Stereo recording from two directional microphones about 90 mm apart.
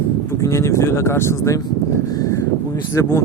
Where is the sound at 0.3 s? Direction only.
35° left (ahead or behind).